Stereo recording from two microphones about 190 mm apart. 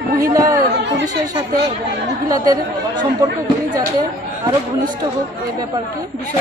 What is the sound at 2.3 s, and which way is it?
Speech, 20° right (ahead or behind).